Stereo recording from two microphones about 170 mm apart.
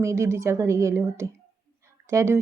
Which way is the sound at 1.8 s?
15° right (ahead or behind).